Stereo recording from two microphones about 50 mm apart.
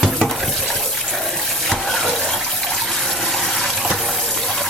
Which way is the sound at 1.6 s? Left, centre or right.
Centre.